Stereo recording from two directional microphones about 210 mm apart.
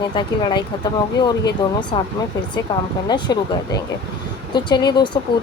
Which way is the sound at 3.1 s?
20° left (ahead or behind).